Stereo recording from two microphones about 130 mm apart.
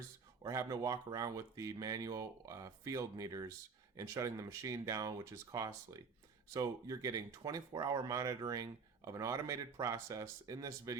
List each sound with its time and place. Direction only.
0.4 s speech: 25° right (ahead or behind)